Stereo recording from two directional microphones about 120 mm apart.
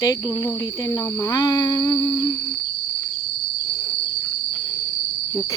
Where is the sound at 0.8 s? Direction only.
25° left (ahead or behind).